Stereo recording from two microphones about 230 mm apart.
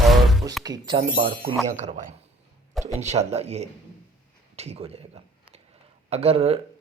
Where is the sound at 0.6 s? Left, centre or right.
Centre.